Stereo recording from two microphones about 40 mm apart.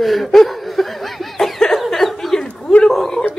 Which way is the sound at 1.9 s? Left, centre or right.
Centre.